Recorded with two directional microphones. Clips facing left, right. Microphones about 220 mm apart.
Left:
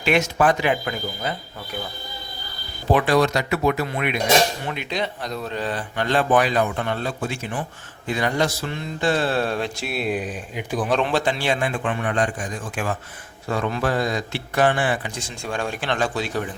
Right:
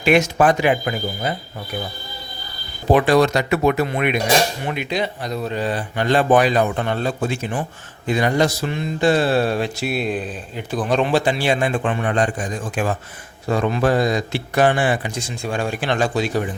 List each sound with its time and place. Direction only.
0.0 s speech: 10° right (ahead or behind)
2.9 s speech: 20° right (ahead or behind); by 10.9 s 10° left (ahead or behind)
10.9 s speech: 5° right (ahead or behind)
11.6 s speech: 30° right (ahead or behind)
13.5 s speech: 20° right (ahead or behind)